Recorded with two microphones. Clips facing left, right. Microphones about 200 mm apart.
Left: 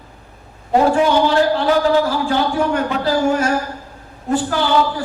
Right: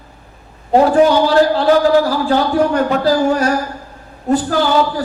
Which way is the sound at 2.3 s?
40° right (ahead or behind).